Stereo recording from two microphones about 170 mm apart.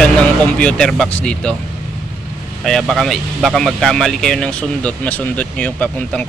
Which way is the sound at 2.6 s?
Centre (ahead or behind).